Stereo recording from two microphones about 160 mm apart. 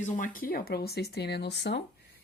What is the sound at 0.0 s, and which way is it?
Speech, 55° left (ahead or behind).